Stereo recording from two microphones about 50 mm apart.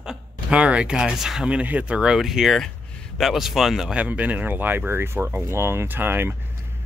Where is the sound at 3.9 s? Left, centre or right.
Right.